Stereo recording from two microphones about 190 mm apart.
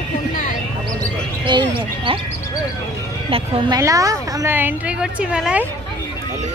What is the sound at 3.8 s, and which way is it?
A woman's voice, 15° right (ahead or behind).